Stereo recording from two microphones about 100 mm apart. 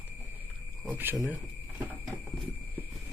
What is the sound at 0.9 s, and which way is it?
Speech, 20° right (ahead or behind).